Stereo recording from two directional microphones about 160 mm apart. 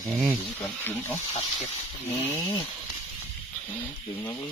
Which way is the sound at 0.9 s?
15° left (ahead or behind).